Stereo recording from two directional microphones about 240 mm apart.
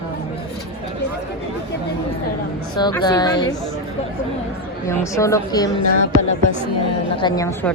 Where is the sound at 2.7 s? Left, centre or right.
Centre.